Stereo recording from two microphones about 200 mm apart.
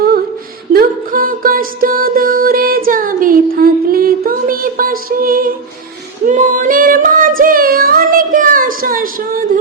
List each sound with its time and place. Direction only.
0.7 s music: 45° right (ahead or behind)
6.2 s female singing: 40° right (ahead or behind)